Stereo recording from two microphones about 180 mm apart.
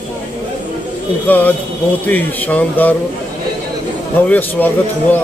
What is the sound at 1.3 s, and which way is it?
Speech, 10° left (ahead or behind).